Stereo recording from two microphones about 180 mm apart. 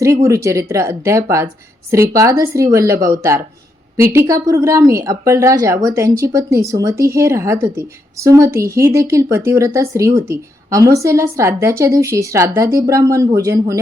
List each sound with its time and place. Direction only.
0.0 s speech: 15° right (ahead or behind)